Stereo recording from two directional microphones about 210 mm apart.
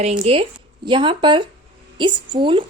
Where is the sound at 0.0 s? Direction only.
30° right (ahead or behind).